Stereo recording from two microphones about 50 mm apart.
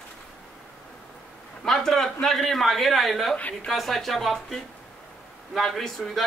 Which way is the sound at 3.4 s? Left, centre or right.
Left.